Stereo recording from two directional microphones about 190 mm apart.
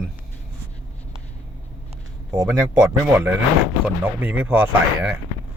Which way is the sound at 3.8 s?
10° right (ahead or behind).